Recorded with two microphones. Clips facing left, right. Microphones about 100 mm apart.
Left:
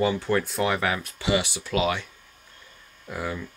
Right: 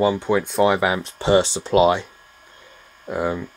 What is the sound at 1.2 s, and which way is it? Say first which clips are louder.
Speech: right 9 dB; 40° right (ahead or behind).